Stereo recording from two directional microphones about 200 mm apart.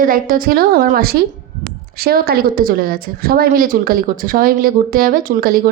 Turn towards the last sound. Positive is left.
turn(degrees=-45)  # may be behind; listen again after turning